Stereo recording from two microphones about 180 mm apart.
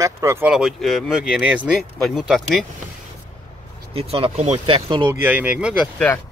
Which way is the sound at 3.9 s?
30° right (ahead or behind).